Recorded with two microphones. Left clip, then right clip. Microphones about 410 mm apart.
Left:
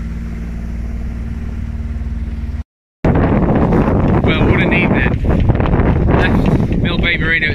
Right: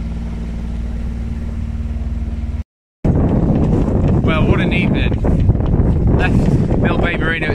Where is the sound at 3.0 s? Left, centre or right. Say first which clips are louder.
Left 4 dB; left.